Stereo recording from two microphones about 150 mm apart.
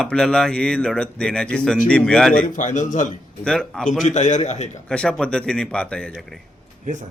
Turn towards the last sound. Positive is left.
turn(degrees=-55)  # may be behind; listen again after turning